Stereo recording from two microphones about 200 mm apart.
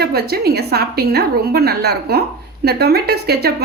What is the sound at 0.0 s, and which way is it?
A woman's voice, 50° right (ahead or behind).